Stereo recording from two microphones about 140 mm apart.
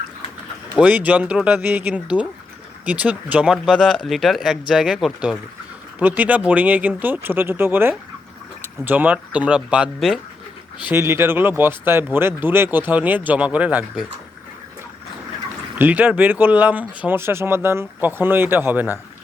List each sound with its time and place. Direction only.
0.8 s speech: 10° right (ahead or behind)
10.8 s speech: 20° right (ahead or behind)
15.8 s speech: 10° right (ahead or behind)